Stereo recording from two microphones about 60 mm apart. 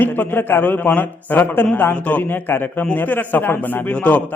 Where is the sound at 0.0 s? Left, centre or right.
Left.